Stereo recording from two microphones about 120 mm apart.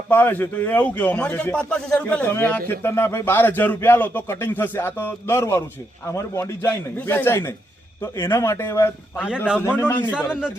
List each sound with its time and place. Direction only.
0.1 s a man's voice: 15° left (ahead or behind)
10.2 s a man's voice: 5° right (ahead or behind)